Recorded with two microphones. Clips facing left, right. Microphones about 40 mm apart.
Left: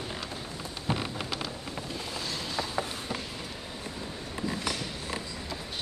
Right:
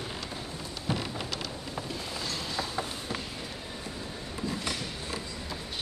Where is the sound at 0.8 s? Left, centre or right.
Centre.